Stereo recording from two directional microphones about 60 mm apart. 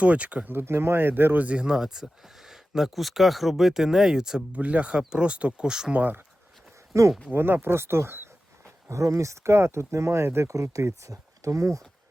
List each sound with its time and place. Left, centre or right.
0.0 s speech: right
0.5 s speech: right
1.5 s speech: centre
4.5 s speech: right
5.9 s speech: right
6.9 s speech: right
7.3 s speech: right
8.9 s speech: right
10.5 s speech: right